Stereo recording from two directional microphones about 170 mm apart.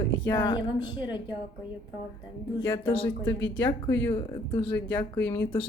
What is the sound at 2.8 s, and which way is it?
Speech, 30° left (ahead or behind).